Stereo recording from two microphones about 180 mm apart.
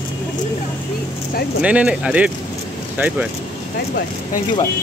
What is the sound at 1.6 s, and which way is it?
Speech, 5° right (ahead or behind).